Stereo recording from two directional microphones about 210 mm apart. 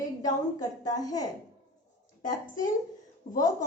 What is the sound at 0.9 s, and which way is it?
Speech, 15° left (ahead or behind).